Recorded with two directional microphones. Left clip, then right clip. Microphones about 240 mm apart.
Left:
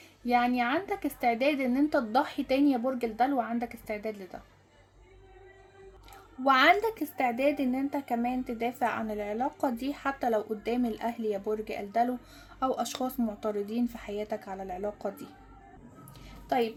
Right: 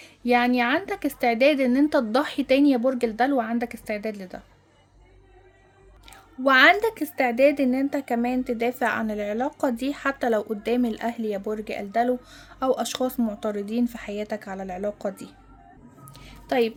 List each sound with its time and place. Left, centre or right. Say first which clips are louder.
0.0 s a woman's voice: right 5 dB; right
6.1 s a woman's voice: right 5 dB; right
16.2 s a sound: right 5 dB; right